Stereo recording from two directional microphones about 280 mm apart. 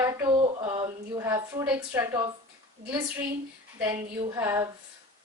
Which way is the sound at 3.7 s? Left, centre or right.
Centre.